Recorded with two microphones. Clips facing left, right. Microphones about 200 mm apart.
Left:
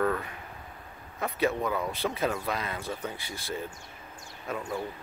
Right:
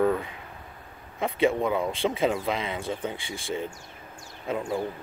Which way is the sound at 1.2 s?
25° right (ahead or behind).